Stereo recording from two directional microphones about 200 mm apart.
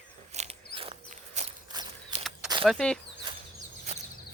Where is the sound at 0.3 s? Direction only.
30° right (ahead or behind).